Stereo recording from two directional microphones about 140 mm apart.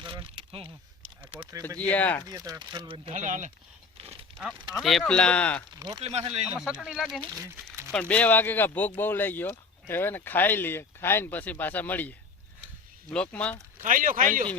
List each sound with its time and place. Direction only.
0.0 s speech: 35° right (ahead or behind)
1.8 s speech: 10° left (ahead or behind)
2.2 s speech: 25° right (ahead or behind)
3.2 s speech: 60° right (ahead or behind)
3.9 s a sound: 40° right (ahead or behind)
4.7 s speech: centre (ahead or behind)
6.0 s speech: 45° right (ahead or behind)
6.6 s speech: 5° right (ahead or behind)
7.3 s crumpling: 20° right (ahead or behind)
7.9 s speech: 10° left (ahead or behind)
13.8 s speech: 75° right (ahead or behind)